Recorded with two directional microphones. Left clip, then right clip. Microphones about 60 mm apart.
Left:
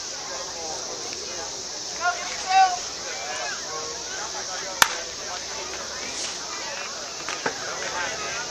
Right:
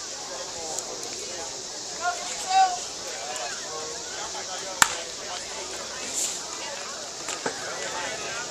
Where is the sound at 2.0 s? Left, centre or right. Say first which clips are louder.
Left 3 dB; right.